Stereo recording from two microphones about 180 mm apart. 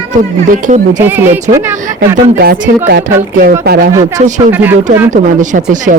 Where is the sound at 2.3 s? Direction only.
55° right (ahead or behind).